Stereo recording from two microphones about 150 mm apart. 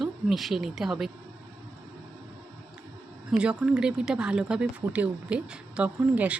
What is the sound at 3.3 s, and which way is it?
Speech, 5° right (ahead or behind).